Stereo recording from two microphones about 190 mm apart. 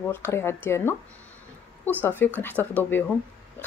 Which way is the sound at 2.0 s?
10° left (ahead or behind).